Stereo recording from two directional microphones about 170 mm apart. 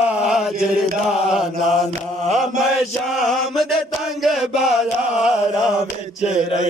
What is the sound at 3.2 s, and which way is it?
Chant, centre (ahead or behind).